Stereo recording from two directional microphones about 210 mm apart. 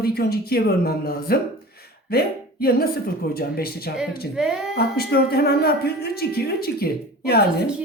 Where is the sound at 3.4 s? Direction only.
45° left (ahead or behind).